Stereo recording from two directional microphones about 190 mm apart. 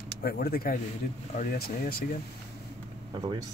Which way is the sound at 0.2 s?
55° left (ahead or behind).